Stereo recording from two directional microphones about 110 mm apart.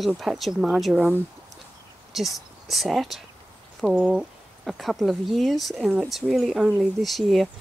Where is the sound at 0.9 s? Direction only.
15° right (ahead or behind).